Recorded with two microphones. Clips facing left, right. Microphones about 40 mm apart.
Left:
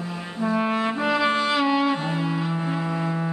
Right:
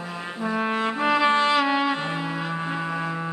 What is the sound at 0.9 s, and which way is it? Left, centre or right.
Music, centre.